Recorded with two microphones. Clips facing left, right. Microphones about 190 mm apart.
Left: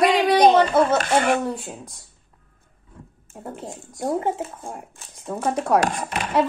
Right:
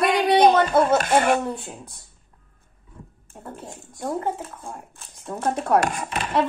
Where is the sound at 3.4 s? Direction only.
20° left (ahead or behind).